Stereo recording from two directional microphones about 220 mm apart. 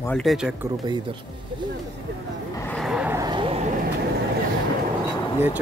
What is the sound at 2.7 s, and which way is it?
Vehicle, centre (ahead or behind).